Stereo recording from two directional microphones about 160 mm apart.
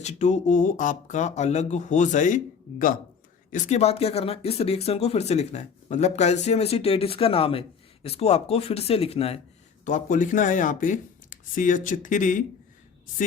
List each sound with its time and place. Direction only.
0.0 s speech: 45° left (ahead or behind)
3.5 s speech: 45° left (ahead or behind)
9.8 s speech: 55° left (ahead or behind)